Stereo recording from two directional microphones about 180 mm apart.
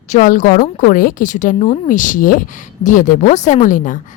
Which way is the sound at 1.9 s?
45° left (ahead or behind).